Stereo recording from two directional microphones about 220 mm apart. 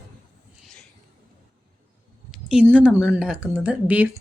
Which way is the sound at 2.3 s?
5° right (ahead or behind).